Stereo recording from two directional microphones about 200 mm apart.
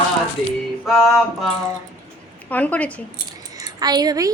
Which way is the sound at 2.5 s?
10° left (ahead or behind).